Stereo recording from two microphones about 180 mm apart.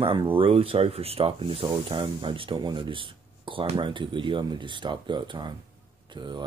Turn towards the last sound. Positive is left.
turn(degrees=-25)  # may be behind; listen again after turning